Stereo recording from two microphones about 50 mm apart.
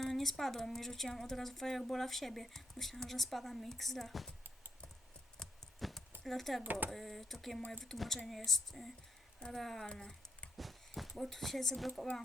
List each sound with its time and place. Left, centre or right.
0.0 s a woman's voice: centre
6.2 s a woman's voice: centre
6.6 s speech: right
6.9 s a woman's voice: centre
9.8 s speech: centre
10.6 s a sound: centre
11.2 s a woman's voice: centre